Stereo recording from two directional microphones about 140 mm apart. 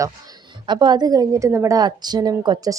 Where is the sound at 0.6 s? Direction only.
30° right (ahead or behind).